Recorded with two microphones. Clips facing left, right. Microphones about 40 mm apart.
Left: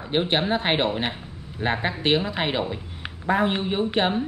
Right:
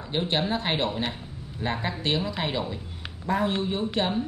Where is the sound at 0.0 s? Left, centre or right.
Left.